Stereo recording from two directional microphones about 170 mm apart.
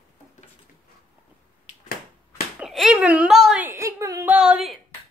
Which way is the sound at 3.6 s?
15° right (ahead or behind).